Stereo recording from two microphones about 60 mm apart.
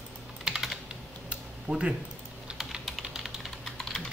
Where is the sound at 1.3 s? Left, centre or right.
Centre.